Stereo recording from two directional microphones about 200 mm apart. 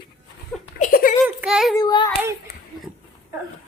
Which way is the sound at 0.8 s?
45° left (ahead or behind).